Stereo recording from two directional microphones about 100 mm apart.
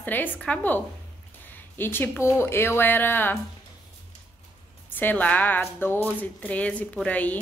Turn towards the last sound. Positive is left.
turn(degrees=15)  # may be behind; listen again after turning